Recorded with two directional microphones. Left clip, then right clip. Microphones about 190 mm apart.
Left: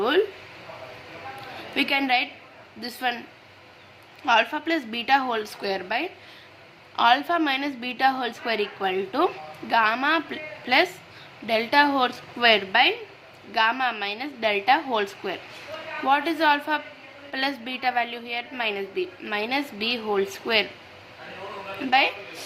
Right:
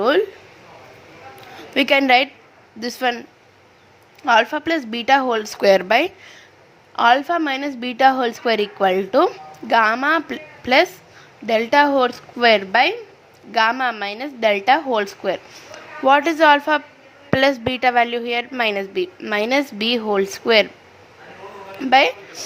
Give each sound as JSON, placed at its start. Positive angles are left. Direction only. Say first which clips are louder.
{"t": 1.7, "sound": "a woman's voice", "louder": "right 8 dB", "side_deg": -50}
{"t": 4.3, "sound": "a woman's voice", "louder": "right 5 dB", "side_deg": -40}
{"t": 6.9, "sound": "a woman's voice", "louder": "right 5 dB", "side_deg": -40}
{"t": 21.8, "sound": "a woman's voice", "louder": "right 7 dB", "side_deg": -50}